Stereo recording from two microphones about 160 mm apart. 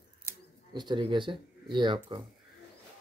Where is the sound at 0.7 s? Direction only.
30° right (ahead or behind).